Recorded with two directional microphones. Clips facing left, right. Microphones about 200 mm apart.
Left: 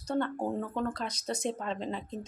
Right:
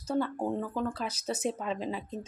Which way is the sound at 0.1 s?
Centre (ahead or behind).